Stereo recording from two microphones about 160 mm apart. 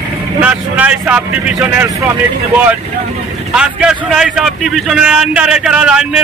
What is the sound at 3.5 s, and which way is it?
A man's voice, 5° right (ahead or behind).